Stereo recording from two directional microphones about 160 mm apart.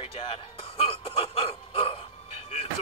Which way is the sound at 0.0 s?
35° left (ahead or behind).